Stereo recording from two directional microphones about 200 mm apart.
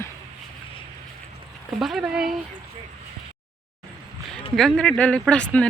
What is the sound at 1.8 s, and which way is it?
Speech, centre (ahead or behind).